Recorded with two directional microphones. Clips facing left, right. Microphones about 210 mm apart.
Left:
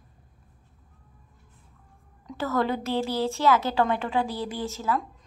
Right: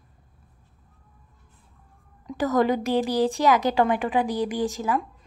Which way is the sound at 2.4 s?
15° right (ahead or behind).